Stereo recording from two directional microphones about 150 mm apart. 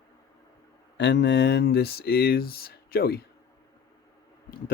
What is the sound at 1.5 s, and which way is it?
Speech, 90° left.